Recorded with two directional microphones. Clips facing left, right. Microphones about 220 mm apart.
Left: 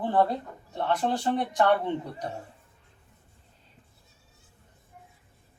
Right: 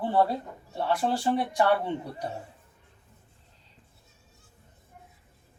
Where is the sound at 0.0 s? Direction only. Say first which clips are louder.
Even; 10° right (ahead or behind).